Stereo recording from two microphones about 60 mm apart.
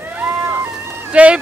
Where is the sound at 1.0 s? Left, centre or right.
Right.